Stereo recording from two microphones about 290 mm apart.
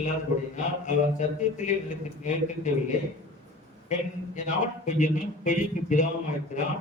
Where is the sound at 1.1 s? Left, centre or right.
Left.